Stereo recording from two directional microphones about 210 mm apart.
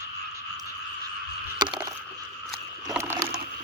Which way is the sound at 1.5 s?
20° right (ahead or behind).